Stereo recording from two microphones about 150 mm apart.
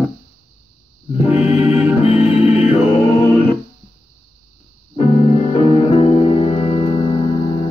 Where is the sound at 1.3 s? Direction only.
45° left (ahead or behind).